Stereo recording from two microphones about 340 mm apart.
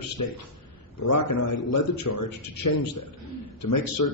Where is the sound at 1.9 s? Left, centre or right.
Left.